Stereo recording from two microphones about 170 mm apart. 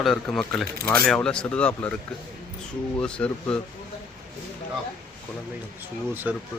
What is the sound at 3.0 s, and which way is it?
Speech, 5° left (ahead or behind).